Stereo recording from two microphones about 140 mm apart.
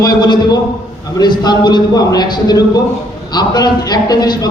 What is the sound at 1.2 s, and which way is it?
A man's voice, 30° left (ahead or behind).